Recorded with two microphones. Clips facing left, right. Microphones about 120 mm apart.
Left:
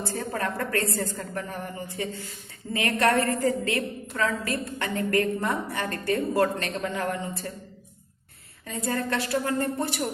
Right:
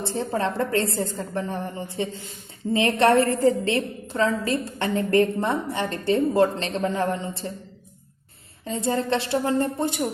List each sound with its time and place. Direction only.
0.0 s a woman's voice: 25° right (ahead or behind)
8.6 s a woman's voice: 25° right (ahead or behind)